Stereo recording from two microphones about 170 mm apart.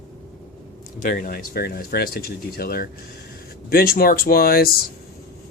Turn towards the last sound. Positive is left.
turn(degrees=60)  # may be behind; listen again after turning